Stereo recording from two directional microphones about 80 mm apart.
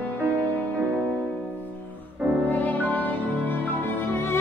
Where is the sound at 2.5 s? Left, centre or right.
Left.